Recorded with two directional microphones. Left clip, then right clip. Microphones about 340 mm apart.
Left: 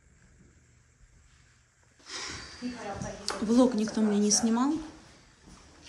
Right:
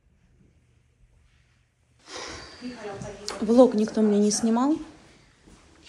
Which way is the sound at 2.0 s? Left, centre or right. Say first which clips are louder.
Right 1 dB; centre.